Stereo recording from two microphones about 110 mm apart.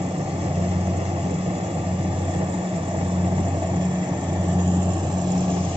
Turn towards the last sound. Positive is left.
turn(degrees=-40)  # may be behind; listen again after turning